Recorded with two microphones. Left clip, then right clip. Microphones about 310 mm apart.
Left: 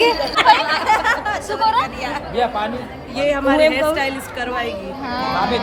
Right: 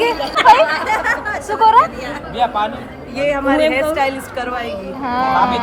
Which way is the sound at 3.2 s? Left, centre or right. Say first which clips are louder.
Right 1 dB; centre.